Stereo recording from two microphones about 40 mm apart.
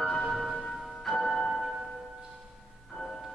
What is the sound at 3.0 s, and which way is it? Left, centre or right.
Music, centre.